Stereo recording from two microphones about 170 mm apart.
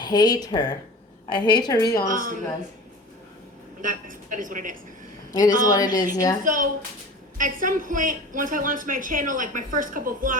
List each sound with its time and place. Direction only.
0.0 s speech: 25° left (ahead or behind)
2.0 s a woman's voice: 50° right (ahead or behind)
3.8 s a woman's voice: 50° right (ahead or behind)
5.3 s a woman's voice: 20° left (ahead or behind)
6.4 s a woman's voice: 50° right (ahead or behind)